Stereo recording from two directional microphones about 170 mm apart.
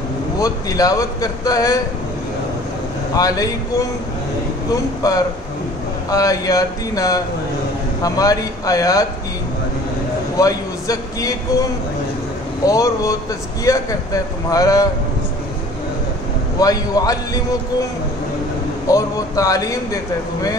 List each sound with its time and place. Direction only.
0.4 s a man's voice: 20° left (ahead or behind)
3.2 s a man's voice: 20° left (ahead or behind)
10.3 s a man's voice: 20° left (ahead or behind)
12.6 s a man's voice: 20° left (ahead or behind)
16.5 s a man's voice: 20° left (ahead or behind)
18.9 s a man's voice: 20° left (ahead or behind)